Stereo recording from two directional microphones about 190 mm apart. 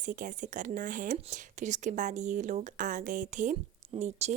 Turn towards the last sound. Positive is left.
turn(degrees=-35)  # may be behind; listen again after turning